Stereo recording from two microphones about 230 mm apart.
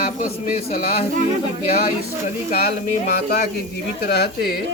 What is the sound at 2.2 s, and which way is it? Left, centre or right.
Speech, left.